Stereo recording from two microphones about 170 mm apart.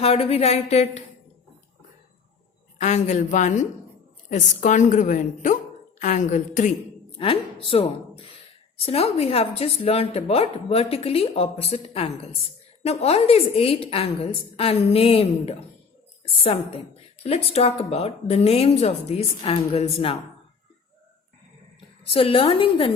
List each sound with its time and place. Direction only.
0.0 s speech: 35° left (ahead or behind)
2.8 s a woman's voice: 45° left (ahead or behind)
7.2 s speech: 35° left (ahead or behind)
22.1 s speech: 30° left (ahead or behind)